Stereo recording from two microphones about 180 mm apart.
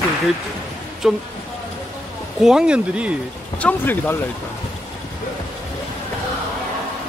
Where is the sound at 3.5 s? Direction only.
10° left (ahead or behind).